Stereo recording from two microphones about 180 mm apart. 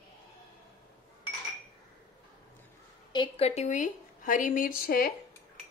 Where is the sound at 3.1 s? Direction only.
30° left (ahead or behind); by 5.1 s 55° left (ahead or behind).